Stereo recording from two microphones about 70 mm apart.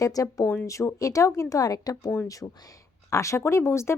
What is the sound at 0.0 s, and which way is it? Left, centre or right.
Speech, left.